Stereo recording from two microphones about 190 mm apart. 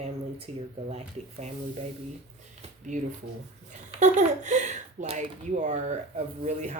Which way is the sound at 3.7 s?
40° right (ahead or behind).